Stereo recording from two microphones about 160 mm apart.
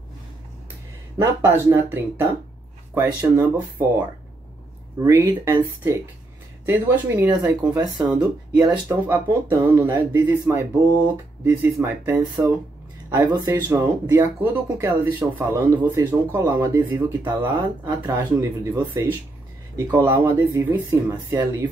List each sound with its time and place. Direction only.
1.1 s speech: 15° right (ahead or behind)
8.0 s speech: 5° right (ahead or behind)
13.1 s speech: 25° right (ahead or behind)
13.5 s speech: 15° right (ahead or behind)
17.2 s speech: 25° right (ahead or behind)
19.9 s speech: 15° right (ahead or behind)